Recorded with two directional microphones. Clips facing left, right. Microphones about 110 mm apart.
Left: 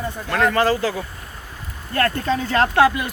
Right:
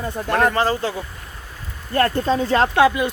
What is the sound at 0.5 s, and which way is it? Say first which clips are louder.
Speech: left 2 dB; 25° right (ahead or behind).